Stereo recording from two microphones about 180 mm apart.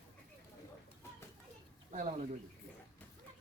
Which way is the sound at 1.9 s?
45° right (ahead or behind).